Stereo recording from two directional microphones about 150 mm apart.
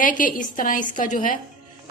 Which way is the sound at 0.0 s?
60° left (ahead or behind).